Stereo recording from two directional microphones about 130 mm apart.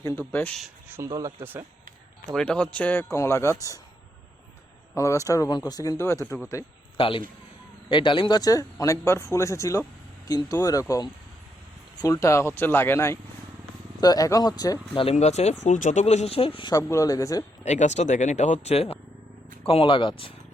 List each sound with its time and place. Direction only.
0.0 s speech: 20° left (ahead or behind)
0.3 s speech: 10° left (ahead or behind)
0.9 s speech: 25° right (ahead or behind)
2.3 s speech: 5° left (ahead or behind); by 3.8 s 25° left (ahead or behind)
4.9 s speech: 25° left (ahead or behind)
6.9 s a man's voice: 40° left (ahead or behind); by 13.1 s 20° left (ahead or behind)
14.0 s speech: 30° left (ahead or behind)
15.1 s speech: 60° left (ahead or behind); by 16.7 s 45° left (ahead or behind)
16.7 s speech: 25° left (ahead or behind)
17.6 s speech: 60° left (ahead or behind); by 20.3 s 40° left (ahead or behind)